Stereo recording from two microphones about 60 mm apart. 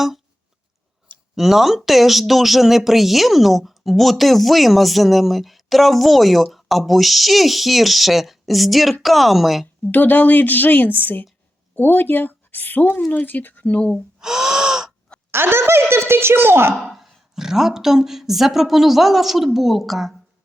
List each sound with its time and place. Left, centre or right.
1.4 s speech: centre
9.9 s a woman's voice: left
13.7 s speech: centre
14.2 s gasp: centre
15.3 s speech: right
16.9 s speech: centre